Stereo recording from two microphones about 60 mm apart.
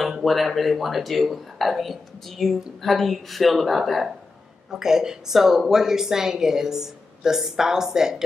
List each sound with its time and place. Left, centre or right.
0.2 s a woman's voice: centre